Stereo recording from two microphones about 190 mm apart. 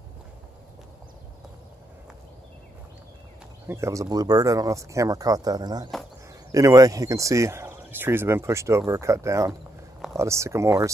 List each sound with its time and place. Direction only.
3.6 s speech: 15° right (ahead or behind)